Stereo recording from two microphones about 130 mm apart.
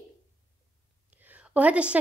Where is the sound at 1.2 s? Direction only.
10° right (ahead or behind).